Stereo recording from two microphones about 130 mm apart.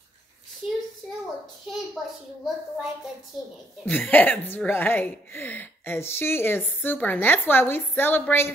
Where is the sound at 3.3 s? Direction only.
5° right (ahead or behind).